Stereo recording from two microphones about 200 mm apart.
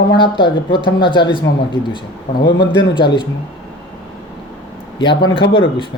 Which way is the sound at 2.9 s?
25° left (ahead or behind).